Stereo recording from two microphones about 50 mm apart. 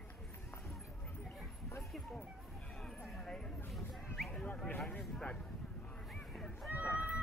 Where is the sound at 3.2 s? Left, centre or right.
Centre.